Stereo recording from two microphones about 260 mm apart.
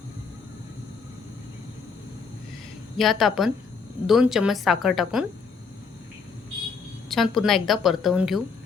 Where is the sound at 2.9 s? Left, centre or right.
Centre.